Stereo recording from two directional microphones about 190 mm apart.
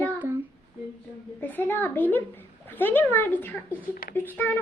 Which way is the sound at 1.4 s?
10° left (ahead or behind).